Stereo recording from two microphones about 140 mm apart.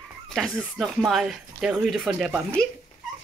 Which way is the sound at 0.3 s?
Centre (ahead or behind).